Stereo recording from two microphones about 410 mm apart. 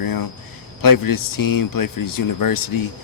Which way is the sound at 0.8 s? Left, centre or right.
Left.